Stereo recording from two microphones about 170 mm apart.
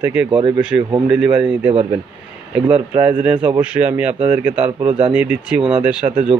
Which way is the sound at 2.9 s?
10° right (ahead or behind).